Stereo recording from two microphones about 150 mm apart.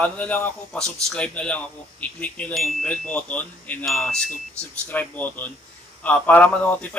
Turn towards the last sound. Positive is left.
turn(degrees=10)  # may be behind; listen again after turning